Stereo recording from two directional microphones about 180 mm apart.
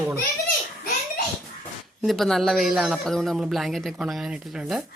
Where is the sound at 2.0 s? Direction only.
Centre (ahead or behind).